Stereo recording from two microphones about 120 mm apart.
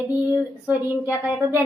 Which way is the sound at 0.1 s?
10° right (ahead or behind).